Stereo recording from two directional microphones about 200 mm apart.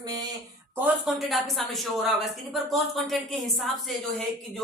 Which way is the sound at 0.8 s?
Centre (ahead or behind).